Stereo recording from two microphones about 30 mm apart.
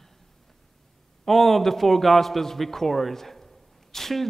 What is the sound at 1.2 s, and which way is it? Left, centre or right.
A man's voice, centre.